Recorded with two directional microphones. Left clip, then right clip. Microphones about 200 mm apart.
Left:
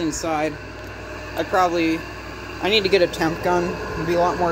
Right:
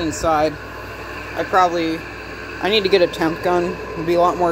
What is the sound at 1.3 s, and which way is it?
Speech, 5° right (ahead or behind).